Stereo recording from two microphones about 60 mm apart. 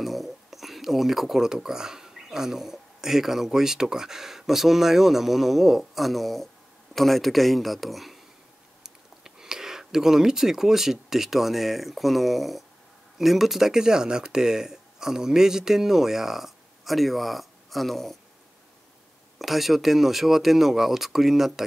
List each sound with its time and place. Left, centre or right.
0.0 s speech: centre
19.3 s speech: centre